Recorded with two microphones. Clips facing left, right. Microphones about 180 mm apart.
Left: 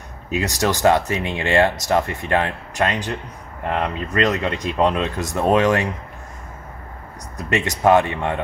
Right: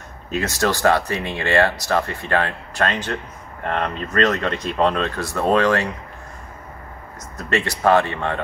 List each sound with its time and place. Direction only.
0.3 s speech: 15° left (ahead or behind)
7.3 s speech: 15° left (ahead or behind)